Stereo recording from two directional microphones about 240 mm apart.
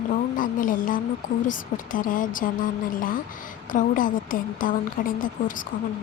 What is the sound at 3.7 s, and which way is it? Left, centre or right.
A woman's voice, left.